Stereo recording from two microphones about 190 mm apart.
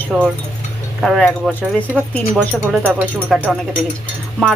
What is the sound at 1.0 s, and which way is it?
Speech, centre (ahead or behind).